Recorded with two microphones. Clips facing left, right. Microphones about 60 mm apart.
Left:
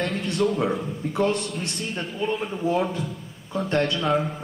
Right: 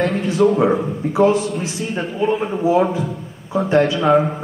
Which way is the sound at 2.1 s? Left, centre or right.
Centre.